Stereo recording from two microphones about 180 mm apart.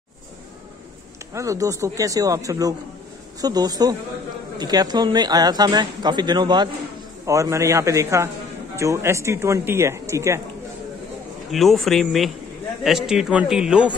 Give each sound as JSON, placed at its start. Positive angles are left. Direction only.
{"t": 1.3, "sound": "speech", "side_deg": -15}
{"t": 11.5, "sound": "a man's voice", "side_deg": 0}